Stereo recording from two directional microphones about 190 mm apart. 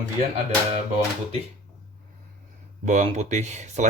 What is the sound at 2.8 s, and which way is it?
Speech, 35° right (ahead or behind).